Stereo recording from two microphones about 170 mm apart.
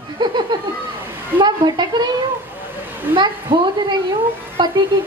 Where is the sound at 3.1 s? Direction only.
30° right (ahead or behind).